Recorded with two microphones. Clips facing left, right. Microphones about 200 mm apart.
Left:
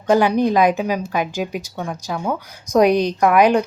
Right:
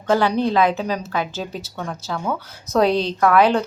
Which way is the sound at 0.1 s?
15° left (ahead or behind).